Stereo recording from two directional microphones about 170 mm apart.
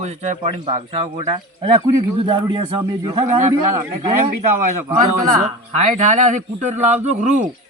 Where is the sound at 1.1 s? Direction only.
30° right (ahead or behind).